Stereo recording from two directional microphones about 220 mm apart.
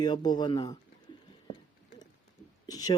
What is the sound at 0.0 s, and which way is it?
Speech, 20° left (ahead or behind).